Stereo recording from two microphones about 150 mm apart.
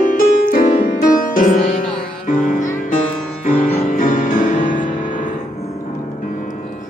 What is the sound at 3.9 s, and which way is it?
Music, 65° left (ahead or behind).